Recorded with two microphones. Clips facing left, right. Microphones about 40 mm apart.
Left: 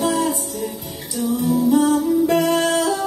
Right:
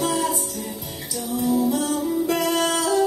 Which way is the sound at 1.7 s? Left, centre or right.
Left.